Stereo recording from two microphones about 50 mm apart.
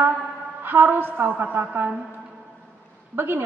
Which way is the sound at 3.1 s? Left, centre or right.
Right.